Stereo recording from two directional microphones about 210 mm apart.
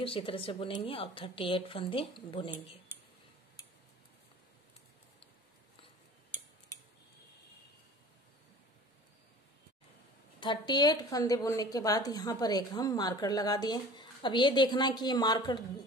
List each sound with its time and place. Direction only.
0.0 s a woman's voice: 25° left (ahead or behind)
10.4 s a woman's voice: 20° left (ahead or behind)